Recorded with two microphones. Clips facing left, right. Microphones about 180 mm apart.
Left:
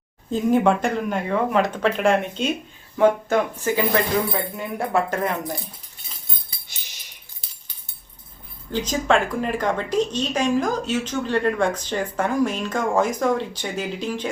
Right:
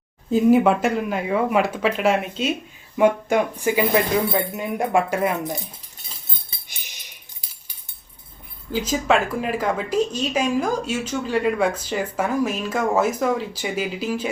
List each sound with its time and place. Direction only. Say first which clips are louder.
0.3 s speech: right 3 dB; 5° right (ahead or behind)
5.4 s speech: right 2 dB; 20° right (ahead or behind)
6.5 s music: right 1 dB; 25° right (ahead or behind)
7.4 s a sound: even; 10° right (ahead or behind)
8.7 s speech: even; 5° right (ahead or behind)